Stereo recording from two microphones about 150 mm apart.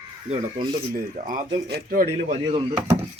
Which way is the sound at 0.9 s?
65° right (ahead or behind).